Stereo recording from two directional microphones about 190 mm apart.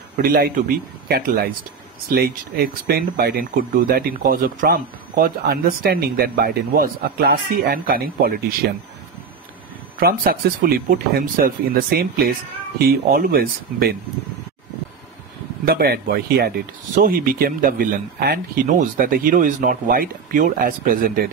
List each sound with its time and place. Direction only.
0.2 s speech: 50° right (ahead or behind)
9.9 s speech: 50° right (ahead or behind)
15.6 s speech: 55° right (ahead or behind)